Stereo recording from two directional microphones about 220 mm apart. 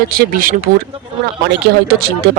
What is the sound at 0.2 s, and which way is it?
Speech, 40° right (ahead or behind).